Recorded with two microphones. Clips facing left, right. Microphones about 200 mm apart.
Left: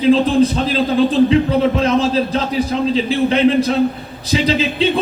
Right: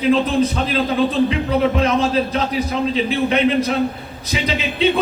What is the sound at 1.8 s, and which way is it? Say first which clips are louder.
A man's voice: left 2 dB; 30° left (ahead or behind).